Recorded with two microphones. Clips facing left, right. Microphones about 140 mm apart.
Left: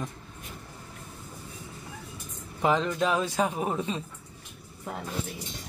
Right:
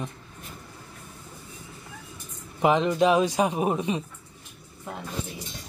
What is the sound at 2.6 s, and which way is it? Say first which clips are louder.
A man's voice: right 4 dB; 20° right (ahead or behind).